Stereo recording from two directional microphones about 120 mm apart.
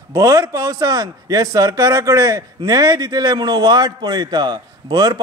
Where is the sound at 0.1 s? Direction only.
30° right (ahead or behind).